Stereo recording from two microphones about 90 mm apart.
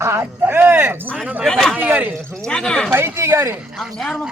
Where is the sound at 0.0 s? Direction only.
30° right (ahead or behind).